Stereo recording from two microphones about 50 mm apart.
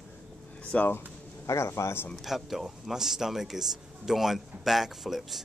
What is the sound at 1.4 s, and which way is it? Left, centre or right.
Speech, left.